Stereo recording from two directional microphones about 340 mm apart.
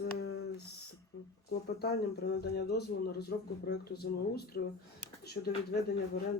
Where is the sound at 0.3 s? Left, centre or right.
Left.